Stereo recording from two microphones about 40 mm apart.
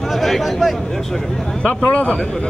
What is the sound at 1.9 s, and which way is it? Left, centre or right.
Speech, left.